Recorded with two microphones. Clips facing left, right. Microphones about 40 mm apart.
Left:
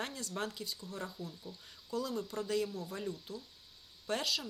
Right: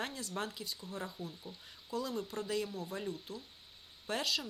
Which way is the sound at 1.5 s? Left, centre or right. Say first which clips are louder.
Left 1 dB; right.